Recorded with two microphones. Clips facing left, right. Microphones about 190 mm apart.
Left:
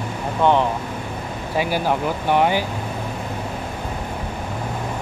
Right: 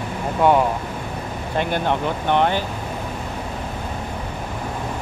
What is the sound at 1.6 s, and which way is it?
Speech, 5° left (ahead or behind).